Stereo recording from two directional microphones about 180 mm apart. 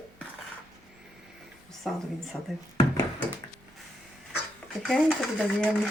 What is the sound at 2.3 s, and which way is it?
Speech, 10° left (ahead or behind).